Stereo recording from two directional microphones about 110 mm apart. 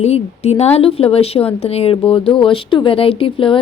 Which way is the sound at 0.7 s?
60° left (ahead or behind).